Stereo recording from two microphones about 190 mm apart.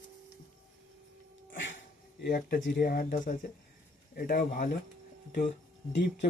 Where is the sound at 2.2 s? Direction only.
50° left (ahead or behind).